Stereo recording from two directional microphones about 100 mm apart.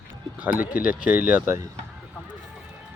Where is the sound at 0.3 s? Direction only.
15° right (ahead or behind).